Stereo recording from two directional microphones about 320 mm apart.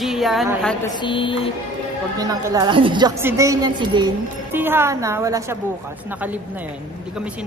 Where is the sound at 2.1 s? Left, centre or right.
Centre.